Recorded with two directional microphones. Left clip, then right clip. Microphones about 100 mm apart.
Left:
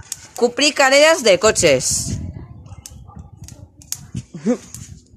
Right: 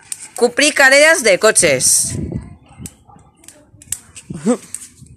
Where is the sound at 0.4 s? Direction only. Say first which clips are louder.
Right 3 dB; centre (ahead or behind).